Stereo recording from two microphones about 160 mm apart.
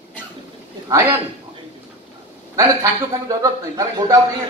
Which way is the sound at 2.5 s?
20° right (ahead or behind).